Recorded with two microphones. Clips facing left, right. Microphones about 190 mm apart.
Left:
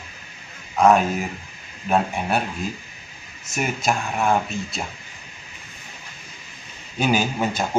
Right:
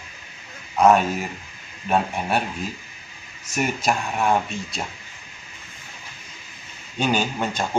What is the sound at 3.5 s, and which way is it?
Speech, centre (ahead or behind).